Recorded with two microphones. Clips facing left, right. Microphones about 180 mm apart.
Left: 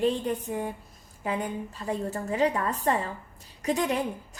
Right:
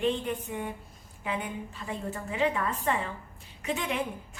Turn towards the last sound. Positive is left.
turn(degrees=40)  # may be behind; listen again after turning